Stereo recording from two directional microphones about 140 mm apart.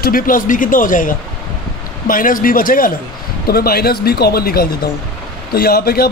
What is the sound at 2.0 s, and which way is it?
Speech, 85° left.